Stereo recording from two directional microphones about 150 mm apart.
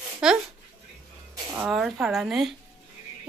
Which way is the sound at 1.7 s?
Centre (ahead or behind).